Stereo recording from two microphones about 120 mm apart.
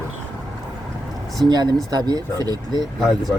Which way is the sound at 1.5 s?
35° right (ahead or behind).